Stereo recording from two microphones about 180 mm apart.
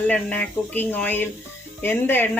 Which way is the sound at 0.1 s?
10° left (ahead or behind).